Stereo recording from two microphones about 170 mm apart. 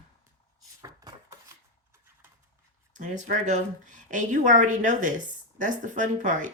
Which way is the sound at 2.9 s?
45° right (ahead or behind).